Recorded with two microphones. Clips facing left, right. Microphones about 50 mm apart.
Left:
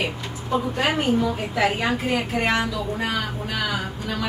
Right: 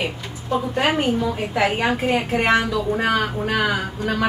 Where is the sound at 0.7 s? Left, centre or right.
Right.